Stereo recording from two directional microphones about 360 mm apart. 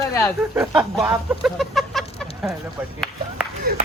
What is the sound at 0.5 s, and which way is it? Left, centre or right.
Chicken, centre.